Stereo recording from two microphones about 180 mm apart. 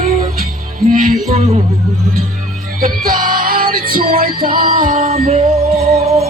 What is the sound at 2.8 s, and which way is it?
Music, 50° right (ahead or behind).